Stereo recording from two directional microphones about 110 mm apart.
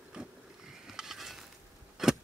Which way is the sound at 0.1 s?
5° right (ahead or behind).